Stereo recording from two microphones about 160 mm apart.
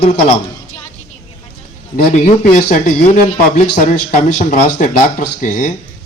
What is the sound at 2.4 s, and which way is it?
A man's voice, 50° left (ahead or behind).